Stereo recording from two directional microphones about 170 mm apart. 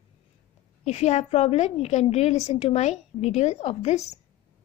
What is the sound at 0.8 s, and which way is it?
A woman's voice, 40° left (ahead or behind).